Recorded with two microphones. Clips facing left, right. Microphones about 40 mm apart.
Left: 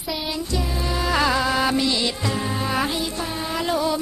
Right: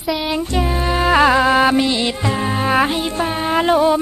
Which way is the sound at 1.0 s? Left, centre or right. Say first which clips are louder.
Right 8 dB; right.